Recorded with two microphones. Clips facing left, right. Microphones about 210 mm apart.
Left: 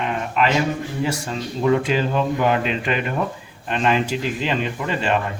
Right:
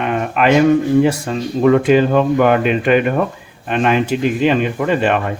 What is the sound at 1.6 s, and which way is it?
Speech, 65° right (ahead or behind).